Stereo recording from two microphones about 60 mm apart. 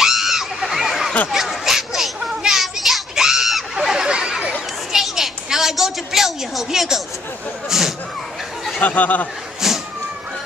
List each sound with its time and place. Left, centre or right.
0.0 s a sound: centre
7.7 s speech: centre
8.7 s speech: left
9.6 s cat: centre